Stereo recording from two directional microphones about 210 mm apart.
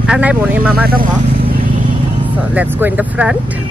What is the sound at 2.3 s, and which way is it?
Speech, 5° right (ahead or behind).